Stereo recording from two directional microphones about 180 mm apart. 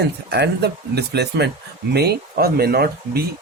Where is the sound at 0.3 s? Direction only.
65° right (ahead or behind).